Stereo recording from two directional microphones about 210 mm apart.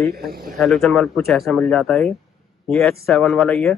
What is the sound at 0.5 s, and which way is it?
A man's voice, centre (ahead or behind).